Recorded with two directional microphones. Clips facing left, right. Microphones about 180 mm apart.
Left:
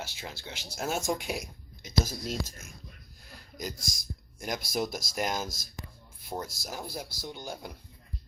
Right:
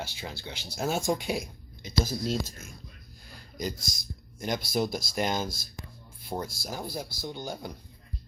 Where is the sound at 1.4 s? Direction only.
30° right (ahead or behind).